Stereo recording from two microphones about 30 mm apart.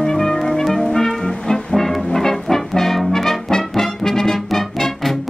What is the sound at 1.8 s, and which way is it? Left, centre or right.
Brass instrument, centre.